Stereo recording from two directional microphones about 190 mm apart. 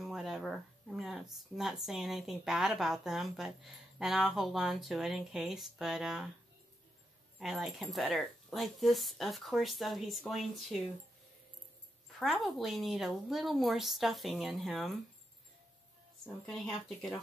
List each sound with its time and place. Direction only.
0.0 s speech: centre (ahead or behind)
7.3 s speech: centre (ahead or behind)
12.2 s speech: centre (ahead or behind)
16.4 s speech: centre (ahead or behind)